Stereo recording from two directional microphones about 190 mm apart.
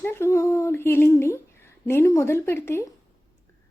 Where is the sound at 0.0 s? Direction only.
10° left (ahead or behind).